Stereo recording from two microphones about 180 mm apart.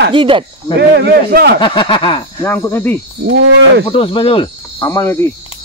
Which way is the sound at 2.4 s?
15° left (ahead or behind).